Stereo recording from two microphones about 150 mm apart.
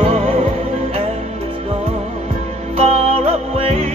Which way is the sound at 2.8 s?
40° right (ahead or behind).